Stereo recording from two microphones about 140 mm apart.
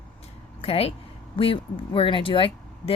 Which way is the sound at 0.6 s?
45° left (ahead or behind).